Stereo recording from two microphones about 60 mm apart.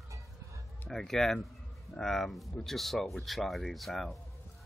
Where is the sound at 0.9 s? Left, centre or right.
Centre.